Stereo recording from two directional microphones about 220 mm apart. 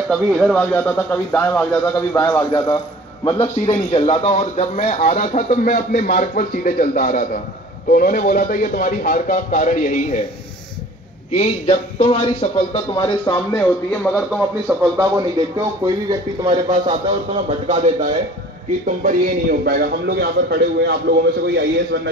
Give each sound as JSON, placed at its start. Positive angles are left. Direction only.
{"t": 0.1, "sound": "a man's voice", "side_deg": 0}
{"t": 11.3, "sound": "speech", "side_deg": 30}
{"t": 13.3, "sound": "speech", "side_deg": 10}
{"t": 14.1, "sound": "speech", "side_deg": -5}
{"t": 15.0, "sound": "speech", "side_deg": -15}
{"t": 19.6, "sound": "a man's voice", "side_deg": -45}